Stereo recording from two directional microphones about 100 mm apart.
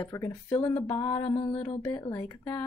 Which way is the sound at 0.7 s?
85° left.